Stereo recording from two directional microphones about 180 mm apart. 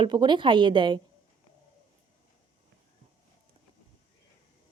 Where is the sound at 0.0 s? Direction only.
25° right (ahead or behind).